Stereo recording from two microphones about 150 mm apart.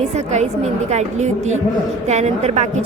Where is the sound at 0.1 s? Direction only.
50° right (ahead or behind).